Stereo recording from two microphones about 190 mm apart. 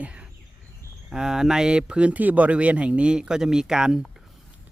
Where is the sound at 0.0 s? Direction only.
5° right (ahead or behind).